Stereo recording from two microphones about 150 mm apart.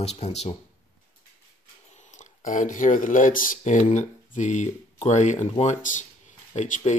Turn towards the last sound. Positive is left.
turn(degrees=50)  # may be behind; listen again after turning